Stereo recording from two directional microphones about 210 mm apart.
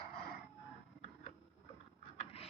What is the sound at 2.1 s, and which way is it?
Mechanisms, 30° left (ahead or behind).